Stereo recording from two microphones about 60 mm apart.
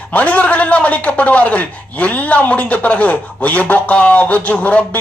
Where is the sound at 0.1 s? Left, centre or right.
Left.